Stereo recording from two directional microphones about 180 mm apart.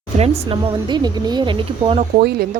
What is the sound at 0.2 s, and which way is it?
Speech, 30° right (ahead or behind).